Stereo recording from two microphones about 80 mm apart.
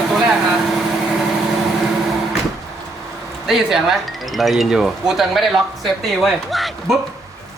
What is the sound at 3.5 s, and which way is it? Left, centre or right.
Speech, centre.